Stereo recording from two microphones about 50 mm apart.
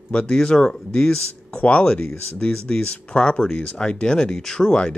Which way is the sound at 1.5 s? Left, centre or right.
Left.